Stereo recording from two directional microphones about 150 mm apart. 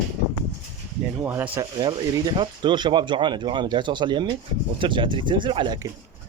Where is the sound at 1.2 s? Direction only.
15° right (ahead or behind).